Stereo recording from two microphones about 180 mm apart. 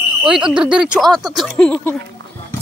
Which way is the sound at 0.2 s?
5° right (ahead or behind).